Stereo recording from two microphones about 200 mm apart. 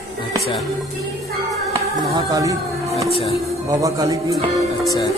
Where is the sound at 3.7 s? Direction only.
15° right (ahead or behind).